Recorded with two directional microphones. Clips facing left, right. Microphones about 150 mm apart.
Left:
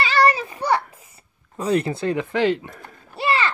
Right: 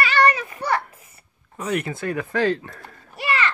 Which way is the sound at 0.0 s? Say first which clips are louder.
Left 1 dB; 30° left (ahead or behind).